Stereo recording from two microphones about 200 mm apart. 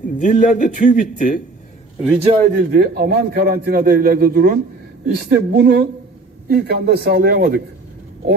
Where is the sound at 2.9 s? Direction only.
55° right (ahead or behind).